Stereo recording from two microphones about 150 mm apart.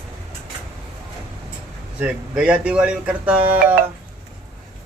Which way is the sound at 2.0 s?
10° right (ahead or behind).